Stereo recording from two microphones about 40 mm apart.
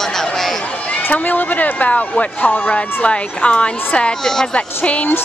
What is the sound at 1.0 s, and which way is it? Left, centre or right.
Speech, left.